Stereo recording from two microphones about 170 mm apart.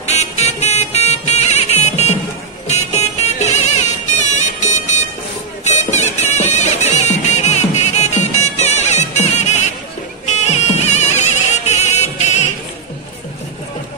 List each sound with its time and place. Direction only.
0.0 s music: 40° left (ahead or behind)
5.6 s a sound: 45° left (ahead or behind)
6.4 s music: 45° left (ahead or behind)